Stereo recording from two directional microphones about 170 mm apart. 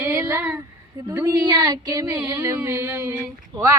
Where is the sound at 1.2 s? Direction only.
20° right (ahead or behind).